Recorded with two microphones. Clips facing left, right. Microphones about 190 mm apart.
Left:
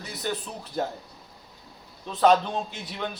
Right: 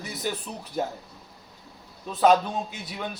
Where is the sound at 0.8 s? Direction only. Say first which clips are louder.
Even; 10° right (ahead or behind).